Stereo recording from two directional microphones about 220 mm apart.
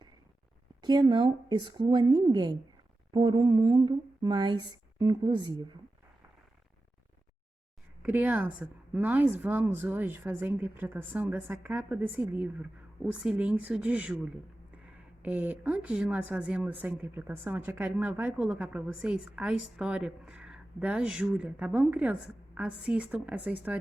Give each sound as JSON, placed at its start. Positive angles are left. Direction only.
{"t": 0.8, "sound": "speech", "side_deg": -20}
{"t": 8.0, "sound": "a woman's voice", "side_deg": -10}